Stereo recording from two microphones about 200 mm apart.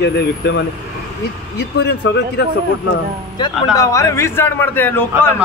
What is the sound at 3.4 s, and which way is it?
A man's voice, 15° left (ahead or behind).